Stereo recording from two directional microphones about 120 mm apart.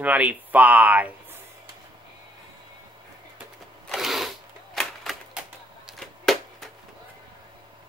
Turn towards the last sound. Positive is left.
turn(degrees=0)  # may be behind; listen again after turning